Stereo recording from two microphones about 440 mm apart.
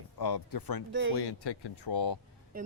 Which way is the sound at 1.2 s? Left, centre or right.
Left.